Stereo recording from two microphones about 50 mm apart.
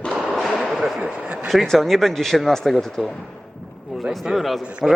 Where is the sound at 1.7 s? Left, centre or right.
Centre.